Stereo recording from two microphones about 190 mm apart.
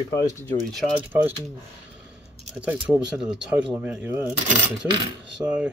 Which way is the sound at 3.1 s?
5° right (ahead or behind).